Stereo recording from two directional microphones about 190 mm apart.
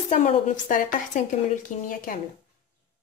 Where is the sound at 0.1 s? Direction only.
45° left (ahead or behind).